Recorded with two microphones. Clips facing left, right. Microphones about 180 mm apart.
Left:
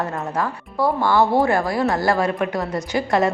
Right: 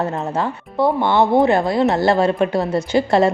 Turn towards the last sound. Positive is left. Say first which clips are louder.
# right 4 dB
turn(degrees=-30)  # may be behind; listen again after turning